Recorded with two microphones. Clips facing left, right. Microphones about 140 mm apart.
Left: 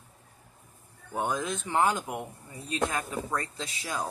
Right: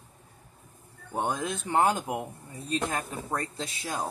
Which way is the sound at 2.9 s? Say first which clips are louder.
Even; 35° right (ahead or behind).